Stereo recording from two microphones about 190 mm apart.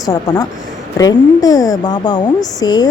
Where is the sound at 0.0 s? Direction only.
20° left (ahead or behind).